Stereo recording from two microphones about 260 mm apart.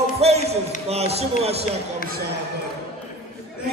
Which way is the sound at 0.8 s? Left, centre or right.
Right.